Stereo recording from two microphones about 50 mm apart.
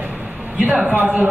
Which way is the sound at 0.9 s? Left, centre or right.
Right.